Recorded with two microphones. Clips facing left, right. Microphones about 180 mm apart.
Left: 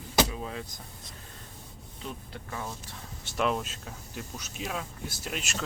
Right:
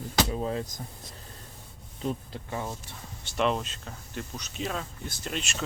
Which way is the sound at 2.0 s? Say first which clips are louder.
Right 7 dB; 25° right (ahead or behind).